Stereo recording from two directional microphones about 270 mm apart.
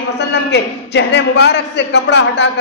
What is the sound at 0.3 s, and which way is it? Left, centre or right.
A man's voice, left.